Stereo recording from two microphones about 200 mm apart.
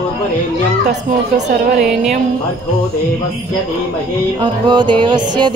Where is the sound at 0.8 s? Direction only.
50° right (ahead or behind).